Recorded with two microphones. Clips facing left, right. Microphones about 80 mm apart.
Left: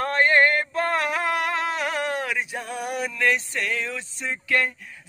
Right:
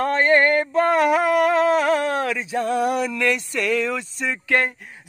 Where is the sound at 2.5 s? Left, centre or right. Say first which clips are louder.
Right 9 dB; right.